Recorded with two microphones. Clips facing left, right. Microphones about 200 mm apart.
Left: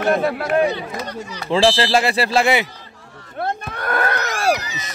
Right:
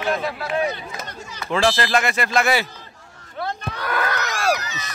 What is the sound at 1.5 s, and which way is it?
Speech, 30° left (ahead or behind).